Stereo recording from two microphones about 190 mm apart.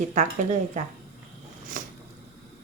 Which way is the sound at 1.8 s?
45° right (ahead or behind).